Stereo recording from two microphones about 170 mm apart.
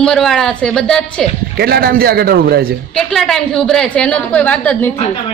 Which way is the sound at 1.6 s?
65° right (ahead or behind).